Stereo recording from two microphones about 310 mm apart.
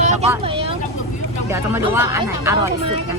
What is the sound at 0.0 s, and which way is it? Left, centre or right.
Vehicle, right.